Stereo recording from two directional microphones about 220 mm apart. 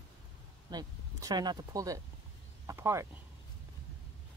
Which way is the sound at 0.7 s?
20° right (ahead or behind).